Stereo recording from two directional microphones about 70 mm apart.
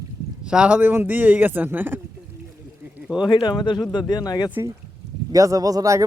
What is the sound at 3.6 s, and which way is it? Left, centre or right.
Speech, left.